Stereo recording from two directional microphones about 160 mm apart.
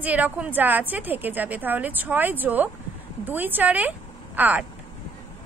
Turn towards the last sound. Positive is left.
turn(degrees=-10)  # may be behind; listen again after turning